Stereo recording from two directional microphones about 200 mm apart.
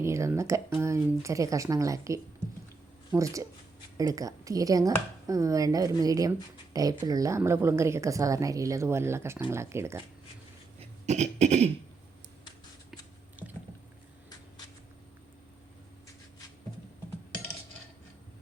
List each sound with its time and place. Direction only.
0.0 s a woman's voice: 15° right (ahead or behind)
10.8 s cough: 35° right (ahead or behind)
12.9 s a sound: 10° right (ahead or behind)